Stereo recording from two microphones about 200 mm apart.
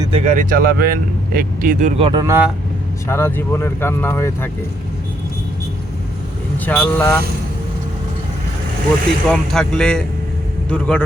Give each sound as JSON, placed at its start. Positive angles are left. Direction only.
{"t": 0.0, "sound": "speech", "side_deg": -30}
{"t": 2.0, "sound": "speech", "side_deg": -25}
{"t": 2.2, "sound": "speech", "side_deg": -15}
{"t": 3.1, "sound": "speech", "side_deg": 10}
{"t": 6.7, "sound": "speech", "side_deg": 5}
{"t": 9.3, "sound": "speech", "side_deg": 0}